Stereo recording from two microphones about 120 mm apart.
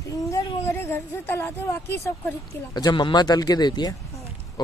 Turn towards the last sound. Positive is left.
turn(degrees=35)  # may be behind; listen again after turning